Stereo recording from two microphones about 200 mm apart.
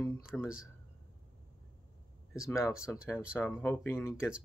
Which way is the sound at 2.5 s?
15° left (ahead or behind).